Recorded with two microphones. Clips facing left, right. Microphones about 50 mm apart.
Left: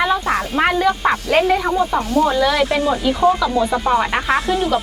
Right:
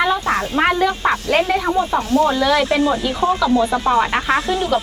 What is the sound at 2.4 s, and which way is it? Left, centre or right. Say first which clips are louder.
A woman's voice: right 1 dB; centre.